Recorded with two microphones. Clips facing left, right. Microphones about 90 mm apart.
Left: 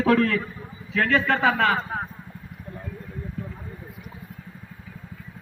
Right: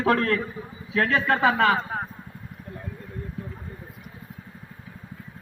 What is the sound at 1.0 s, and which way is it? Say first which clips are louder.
Speech: left 1 dB; 15° right (ahead or behind).